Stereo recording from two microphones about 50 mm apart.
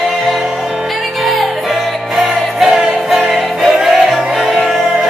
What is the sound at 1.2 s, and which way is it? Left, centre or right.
Music, centre.